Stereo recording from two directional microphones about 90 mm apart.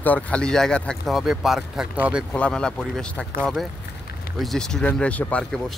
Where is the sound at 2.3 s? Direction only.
10° left (ahead or behind).